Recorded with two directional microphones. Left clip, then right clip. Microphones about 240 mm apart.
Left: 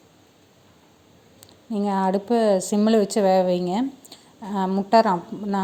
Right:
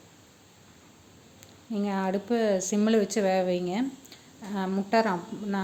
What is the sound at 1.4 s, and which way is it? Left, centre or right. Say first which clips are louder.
Speech: left 5 dB; left.